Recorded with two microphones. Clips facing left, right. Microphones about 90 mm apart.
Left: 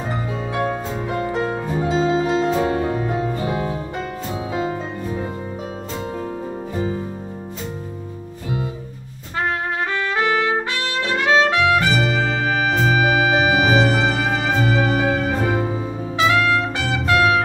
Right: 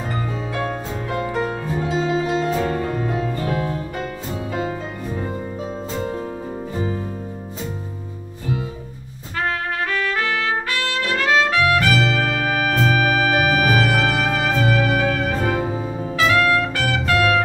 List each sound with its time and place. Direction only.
0.6 s music: 15° left (ahead or behind)
9.8 s trumpet: 25° left (ahead or behind)
12.6 s music: 15° left (ahead or behind)